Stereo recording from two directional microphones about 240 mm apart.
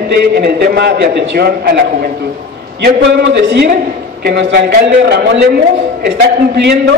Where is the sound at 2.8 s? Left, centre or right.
Right.